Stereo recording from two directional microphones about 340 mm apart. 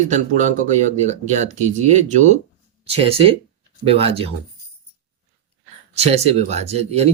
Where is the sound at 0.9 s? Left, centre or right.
Right.